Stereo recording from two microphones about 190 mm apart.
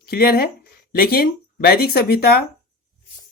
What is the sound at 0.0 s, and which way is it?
Speech, 55° left (ahead or behind).